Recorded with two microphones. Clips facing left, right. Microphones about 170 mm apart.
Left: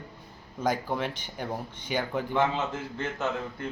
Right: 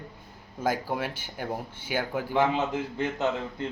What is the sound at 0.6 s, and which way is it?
Speech, 5° right (ahead or behind).